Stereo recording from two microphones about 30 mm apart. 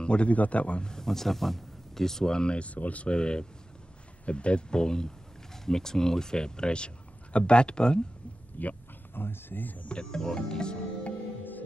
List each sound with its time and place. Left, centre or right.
0.0 s a man's voice: left
0.3 s a man's voice: left
0.7 s speech: left
1.0 s speech: centre
2.3 s speech: left
2.6 s speech: left
3.1 s speech: left
8.6 s speech: left
9.6 s speech: left
9.8 s speech: left